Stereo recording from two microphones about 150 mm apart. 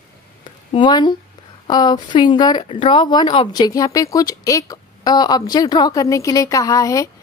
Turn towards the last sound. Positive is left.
turn(degrees=20)  # may be behind; listen again after turning